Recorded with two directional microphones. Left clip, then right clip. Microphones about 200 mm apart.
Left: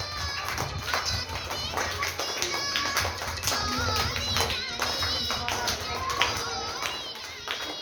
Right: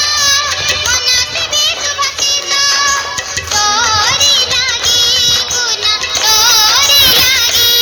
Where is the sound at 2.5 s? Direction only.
50° right (ahead or behind).